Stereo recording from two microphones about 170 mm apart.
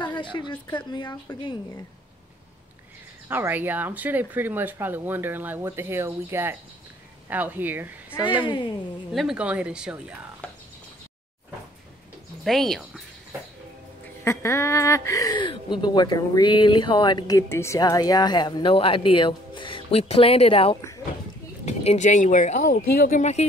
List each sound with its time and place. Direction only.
0.0 s speech: 30° left (ahead or behind)
3.3 s speech: 10° right (ahead or behind)
9.1 s speech: centre (ahead or behind)
10.4 s a sound: 10° left (ahead or behind)
12.4 s speech: centre (ahead or behind)
14.2 s speech: 15° left (ahead or behind); by 23.4 s 45° left (ahead or behind)